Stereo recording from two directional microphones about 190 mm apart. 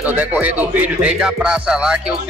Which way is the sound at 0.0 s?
5° right (ahead or behind).